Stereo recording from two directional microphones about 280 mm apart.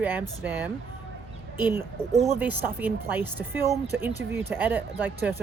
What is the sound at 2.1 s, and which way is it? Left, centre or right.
Speech, right.